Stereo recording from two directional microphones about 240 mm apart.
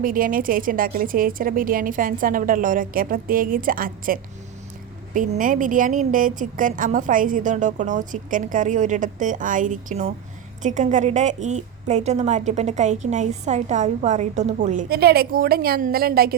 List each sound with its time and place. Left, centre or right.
0.0 s a woman's voice: right